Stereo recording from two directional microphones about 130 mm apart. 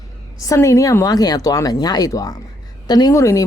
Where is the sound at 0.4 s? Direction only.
25° left (ahead or behind).